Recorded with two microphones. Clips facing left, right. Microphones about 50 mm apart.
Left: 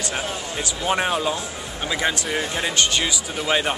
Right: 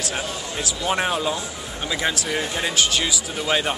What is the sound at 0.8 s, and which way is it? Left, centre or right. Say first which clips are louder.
Speech: left 1 dB; centre.